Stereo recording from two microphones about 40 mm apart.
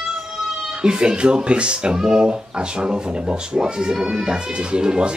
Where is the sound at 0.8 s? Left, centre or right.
Right.